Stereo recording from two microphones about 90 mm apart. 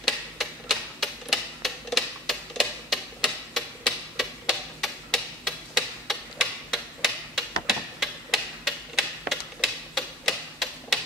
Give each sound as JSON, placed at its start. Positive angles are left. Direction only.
{"t": 0.0, "sound": "tick-tock", "side_deg": 0}